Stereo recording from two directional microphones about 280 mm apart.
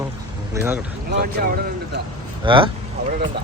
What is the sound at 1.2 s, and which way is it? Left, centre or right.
Speech, right.